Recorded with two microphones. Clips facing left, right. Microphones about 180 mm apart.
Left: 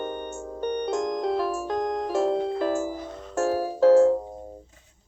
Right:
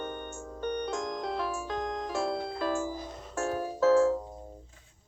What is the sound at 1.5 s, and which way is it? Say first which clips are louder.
Music: left 7 dB; 55° left (ahead or behind).